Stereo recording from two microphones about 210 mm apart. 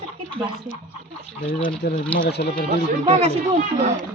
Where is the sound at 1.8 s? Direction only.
50° left (ahead or behind).